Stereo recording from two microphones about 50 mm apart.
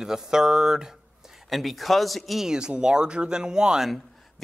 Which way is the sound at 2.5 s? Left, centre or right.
Centre.